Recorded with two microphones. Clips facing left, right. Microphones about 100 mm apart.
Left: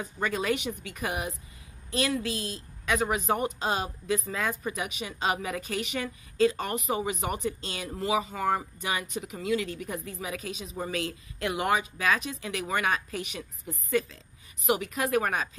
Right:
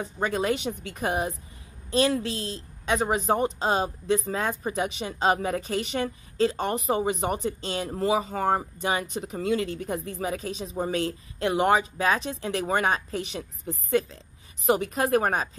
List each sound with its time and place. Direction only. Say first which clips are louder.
0.4 s a woman's voice: right 3 dB; 25° right (ahead or behind)